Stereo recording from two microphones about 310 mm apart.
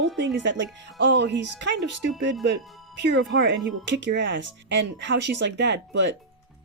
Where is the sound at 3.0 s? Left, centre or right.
Right.